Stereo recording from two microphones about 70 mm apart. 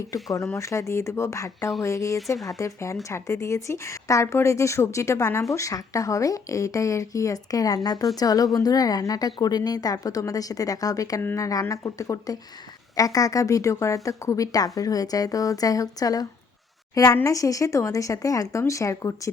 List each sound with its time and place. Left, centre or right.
0.1 s a woman's voice: left